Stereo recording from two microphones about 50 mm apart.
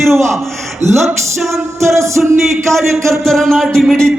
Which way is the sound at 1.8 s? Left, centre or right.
Right.